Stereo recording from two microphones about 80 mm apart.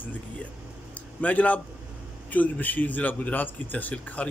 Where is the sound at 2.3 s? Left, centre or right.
Left.